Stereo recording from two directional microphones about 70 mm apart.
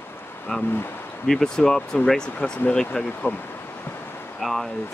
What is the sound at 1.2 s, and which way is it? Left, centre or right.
Speech, centre.